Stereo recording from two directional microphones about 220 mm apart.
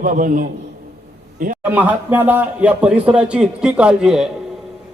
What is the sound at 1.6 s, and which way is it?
Speech, 5° right (ahead or behind).